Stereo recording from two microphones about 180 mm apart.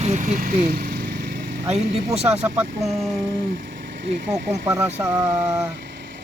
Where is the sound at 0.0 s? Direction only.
40° right (ahead or behind); by 1.5 s 60° right (ahead or behind).